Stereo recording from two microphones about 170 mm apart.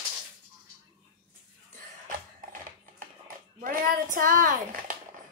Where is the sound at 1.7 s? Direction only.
50° right (ahead or behind).